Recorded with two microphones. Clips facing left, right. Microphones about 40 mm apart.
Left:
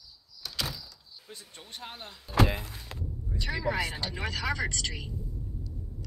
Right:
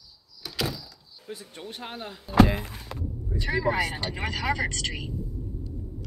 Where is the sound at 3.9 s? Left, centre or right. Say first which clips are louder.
Right 3 dB; right.